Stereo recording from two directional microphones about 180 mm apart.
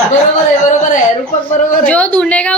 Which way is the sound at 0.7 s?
45° left (ahead or behind).